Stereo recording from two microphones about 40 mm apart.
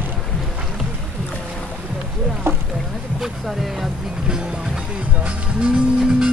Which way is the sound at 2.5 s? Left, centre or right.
Right.